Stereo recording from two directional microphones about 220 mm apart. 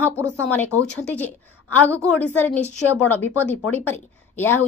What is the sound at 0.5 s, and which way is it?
Speech, 10° left (ahead or behind).